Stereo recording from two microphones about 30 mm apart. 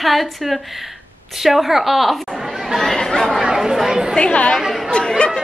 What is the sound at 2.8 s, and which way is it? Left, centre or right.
Speech, centre.